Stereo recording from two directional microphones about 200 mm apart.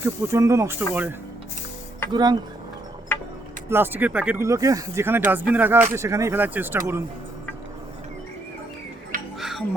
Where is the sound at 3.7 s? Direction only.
10° right (ahead or behind).